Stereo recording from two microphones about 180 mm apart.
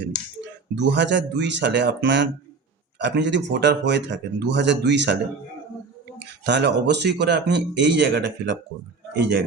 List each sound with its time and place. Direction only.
0.8 s speech: 75° right (ahead or behind)